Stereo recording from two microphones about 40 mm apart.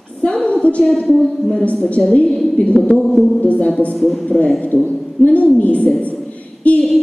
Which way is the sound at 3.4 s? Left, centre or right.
Left.